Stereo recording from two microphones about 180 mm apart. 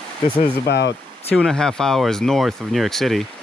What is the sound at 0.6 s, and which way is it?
Speech, 75° left (ahead or behind).